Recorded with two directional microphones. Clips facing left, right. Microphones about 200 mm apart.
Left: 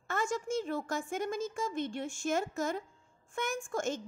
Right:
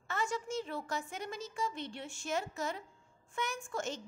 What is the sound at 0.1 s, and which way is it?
A woman's voice, 45° left (ahead or behind).